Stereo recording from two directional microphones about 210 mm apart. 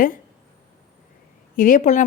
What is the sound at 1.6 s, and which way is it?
Speech, 40° left (ahead or behind).